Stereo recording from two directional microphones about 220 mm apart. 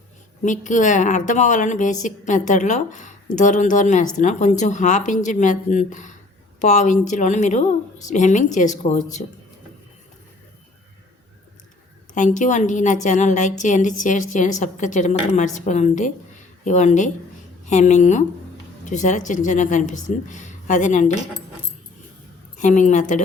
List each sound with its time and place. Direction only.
0.4 s a woman's voice: 35° left (ahead or behind)
12.1 s a woman's voice: 35° left (ahead or behind)
22.5 s a woman's voice: 35° left (ahead or behind)